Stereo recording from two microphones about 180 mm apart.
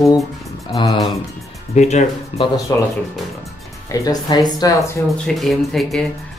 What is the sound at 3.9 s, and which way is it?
Speech, 20° left (ahead or behind).